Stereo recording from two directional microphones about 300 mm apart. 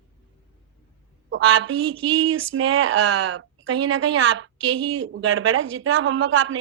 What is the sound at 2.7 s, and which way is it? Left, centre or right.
A woman's voice, right.